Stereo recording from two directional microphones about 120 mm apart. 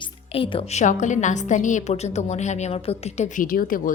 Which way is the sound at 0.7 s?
80° left.